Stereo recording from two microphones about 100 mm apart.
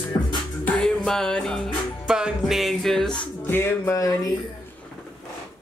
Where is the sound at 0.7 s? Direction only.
10° left (ahead or behind).